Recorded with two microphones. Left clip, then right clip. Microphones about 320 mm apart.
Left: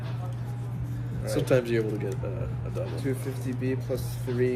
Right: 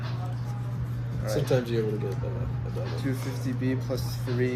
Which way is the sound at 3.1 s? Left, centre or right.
Centre.